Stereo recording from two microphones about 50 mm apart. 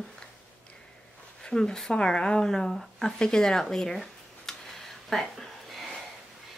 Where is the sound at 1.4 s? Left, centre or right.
Centre.